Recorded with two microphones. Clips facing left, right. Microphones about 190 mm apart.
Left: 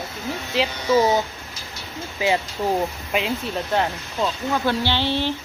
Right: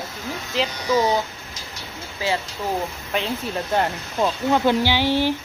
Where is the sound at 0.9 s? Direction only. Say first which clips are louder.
Left 2 dB; 25° left (ahead or behind).